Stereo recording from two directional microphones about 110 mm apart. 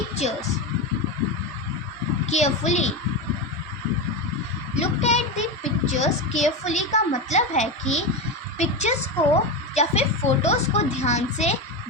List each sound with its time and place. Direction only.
2.2 s a child's voice: 90° left
4.8 s a child's voice: 90° left